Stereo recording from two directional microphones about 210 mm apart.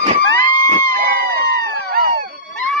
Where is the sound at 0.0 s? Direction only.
35° right (ahead or behind).